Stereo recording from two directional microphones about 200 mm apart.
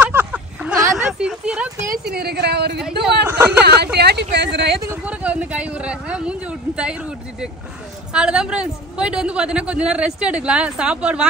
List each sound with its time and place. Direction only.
0.0 s a sound: 10° right (ahead or behind)
0.9 s speech: 5° right (ahead or behind)
2.1 s speech: 55° right (ahead or behind)
3.3 s speech: 10° right (ahead or behind)
3.6 s speech: 55° right (ahead or behind)
4.8 s a man's voice: 5° right (ahead or behind)